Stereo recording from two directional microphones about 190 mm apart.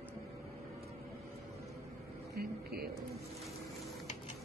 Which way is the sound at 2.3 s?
55° right (ahead or behind).